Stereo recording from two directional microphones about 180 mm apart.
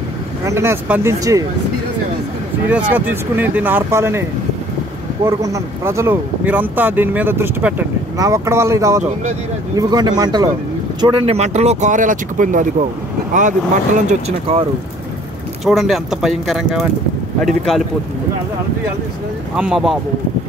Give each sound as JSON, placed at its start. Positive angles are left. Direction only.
{"t": 0.5, "sound": "speech", "side_deg": -15}
{"t": 2.9, "sound": "speech", "side_deg": -10}
{"t": 5.2, "sound": "speech", "side_deg": -15}
{"t": 15.6, "sound": "speech", "side_deg": 0}
{"t": 19.5, "sound": "speech", "side_deg": -5}